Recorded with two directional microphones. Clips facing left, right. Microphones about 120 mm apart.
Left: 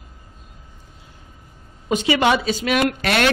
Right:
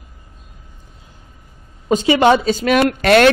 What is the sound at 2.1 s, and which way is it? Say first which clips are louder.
Speech: right 5 dB; 25° right (ahead or behind).